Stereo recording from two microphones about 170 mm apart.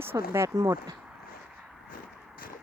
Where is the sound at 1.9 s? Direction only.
55° left (ahead or behind).